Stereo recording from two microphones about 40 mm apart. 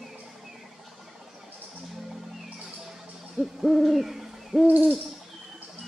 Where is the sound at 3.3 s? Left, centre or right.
Centre.